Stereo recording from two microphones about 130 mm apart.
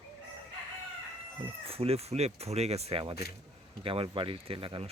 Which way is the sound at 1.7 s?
50° right (ahead or behind).